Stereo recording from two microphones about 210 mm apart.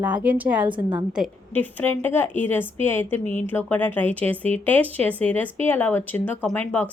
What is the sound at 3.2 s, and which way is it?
Speech, 35° left (ahead or behind).